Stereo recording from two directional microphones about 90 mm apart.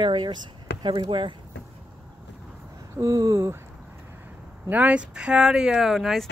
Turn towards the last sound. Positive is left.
turn(degrees=0)  # may be behind; listen again after turning